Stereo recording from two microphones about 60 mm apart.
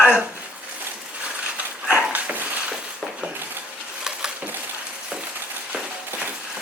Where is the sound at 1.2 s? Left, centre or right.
Centre.